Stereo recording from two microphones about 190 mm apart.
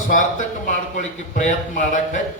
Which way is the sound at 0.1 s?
40° left (ahead or behind).